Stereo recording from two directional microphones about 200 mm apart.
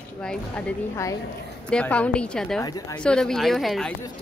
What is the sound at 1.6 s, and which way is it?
A woman's voice, 5° left (ahead or behind).